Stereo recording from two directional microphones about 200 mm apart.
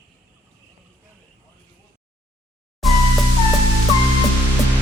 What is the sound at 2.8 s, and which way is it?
Music, centre (ahead or behind).